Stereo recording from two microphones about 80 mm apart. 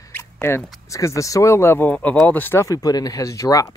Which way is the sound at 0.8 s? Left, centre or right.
Left.